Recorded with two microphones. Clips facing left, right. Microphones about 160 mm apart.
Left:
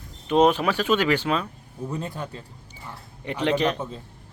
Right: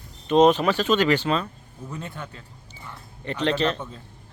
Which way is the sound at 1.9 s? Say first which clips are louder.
Left 3 dB; 35° left (ahead or behind).